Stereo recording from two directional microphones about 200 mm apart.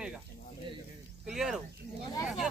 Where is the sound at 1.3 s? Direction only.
Centre (ahead or behind).